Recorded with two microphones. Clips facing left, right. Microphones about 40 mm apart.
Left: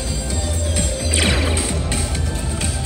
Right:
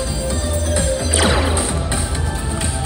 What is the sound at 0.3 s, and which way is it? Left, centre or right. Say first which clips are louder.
Music: right 4 dB; centre.